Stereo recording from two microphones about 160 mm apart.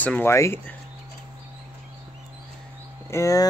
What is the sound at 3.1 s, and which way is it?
Speech, 20° left (ahead or behind).